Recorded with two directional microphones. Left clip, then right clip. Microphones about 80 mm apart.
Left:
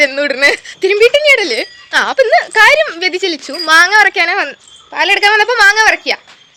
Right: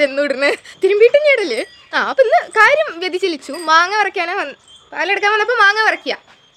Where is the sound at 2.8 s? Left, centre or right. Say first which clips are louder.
Left 4 dB; centre.